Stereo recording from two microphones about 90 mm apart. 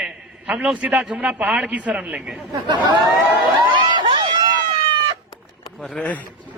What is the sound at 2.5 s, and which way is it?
Speech, 50° right (ahead or behind).